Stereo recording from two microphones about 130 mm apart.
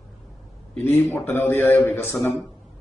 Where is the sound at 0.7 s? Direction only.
15° left (ahead or behind).